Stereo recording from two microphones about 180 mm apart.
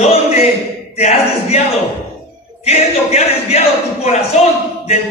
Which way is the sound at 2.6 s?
35° left (ahead or behind).